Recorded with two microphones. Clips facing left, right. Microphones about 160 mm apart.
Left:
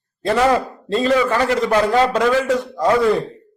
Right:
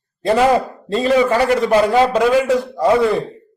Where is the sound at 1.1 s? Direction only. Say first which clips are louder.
Right 4 dB; 15° right (ahead or behind).